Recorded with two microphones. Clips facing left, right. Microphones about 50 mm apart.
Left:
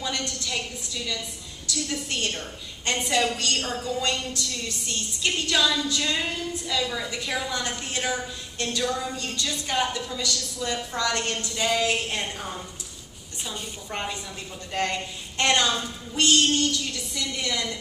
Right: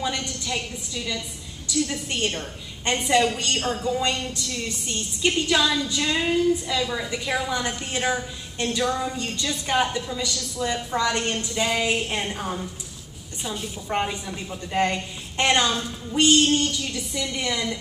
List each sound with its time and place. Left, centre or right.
0.0 s a sound: centre
1.7 s a woman's voice: centre
3.3 s a woman's voice: centre
13.8 s a woman's voice: centre
16.1 s a woman's voice: centre